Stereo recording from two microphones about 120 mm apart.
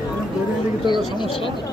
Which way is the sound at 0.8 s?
40° left (ahead or behind).